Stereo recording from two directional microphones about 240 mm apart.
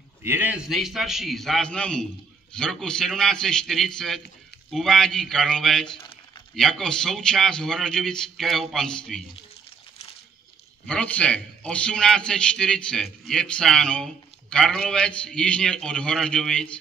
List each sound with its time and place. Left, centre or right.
0.2 s a man's voice: centre
5.9 s crumpling: left
6.5 s a man's voice: centre
10.9 s a man's voice: centre